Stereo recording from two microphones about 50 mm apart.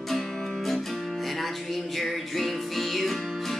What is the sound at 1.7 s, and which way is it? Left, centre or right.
Music, centre.